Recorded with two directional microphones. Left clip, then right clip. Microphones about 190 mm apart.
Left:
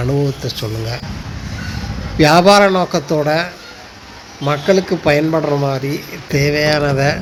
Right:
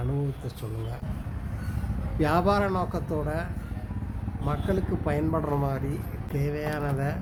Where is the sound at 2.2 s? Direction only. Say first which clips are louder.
Left 16 dB; 15° left (ahead or behind).